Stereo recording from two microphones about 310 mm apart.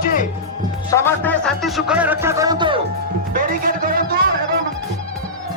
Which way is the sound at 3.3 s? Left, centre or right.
Right.